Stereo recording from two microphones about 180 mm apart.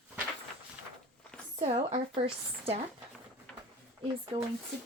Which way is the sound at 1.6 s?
40° right (ahead or behind).